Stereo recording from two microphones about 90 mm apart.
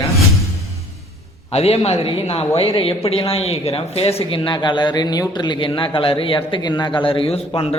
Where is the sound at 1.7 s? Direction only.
90° left; by 6.6 s 75° left (ahead or behind).